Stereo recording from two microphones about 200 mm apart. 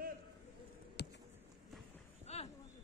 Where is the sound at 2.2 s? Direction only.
30° left (ahead or behind).